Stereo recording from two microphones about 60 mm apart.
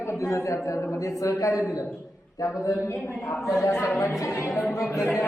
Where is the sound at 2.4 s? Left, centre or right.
Left.